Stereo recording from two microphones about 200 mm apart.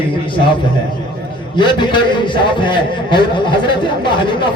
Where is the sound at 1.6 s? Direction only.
25° left (ahead or behind).